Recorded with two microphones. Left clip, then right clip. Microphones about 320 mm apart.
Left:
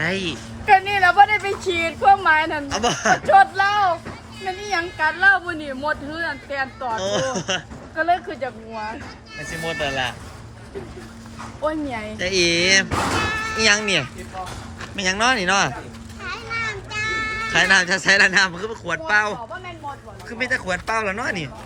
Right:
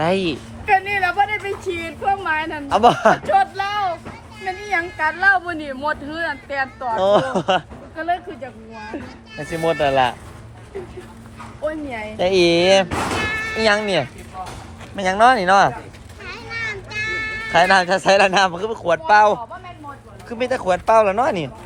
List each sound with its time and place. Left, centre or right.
0.0 s a woman's voice: centre
0.6 s a woman's voice: centre
2.6 s a woman's voice: centre
3.2 s a woman's voice: centre
4.7 s a woman's voice: centre
7.9 s a woman's voice: centre
9.6 s a woman's voice: centre
11.6 s speech: left
12.1 s a woman's voice: centre
16.2 s music: centre
18.3 s a woman's voice: centre
20.4 s a woman's voice: centre